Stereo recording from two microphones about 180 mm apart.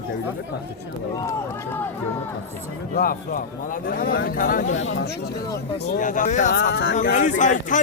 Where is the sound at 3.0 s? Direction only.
50° left (ahead or behind).